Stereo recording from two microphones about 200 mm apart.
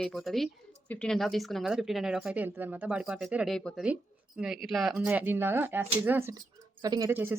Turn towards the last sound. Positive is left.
turn(degrees=-10)  # may be behind; listen again after turning